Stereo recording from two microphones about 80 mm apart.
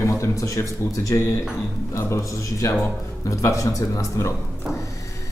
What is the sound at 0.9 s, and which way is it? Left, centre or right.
Speech, left.